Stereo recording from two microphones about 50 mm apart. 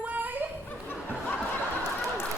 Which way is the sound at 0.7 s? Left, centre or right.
Left.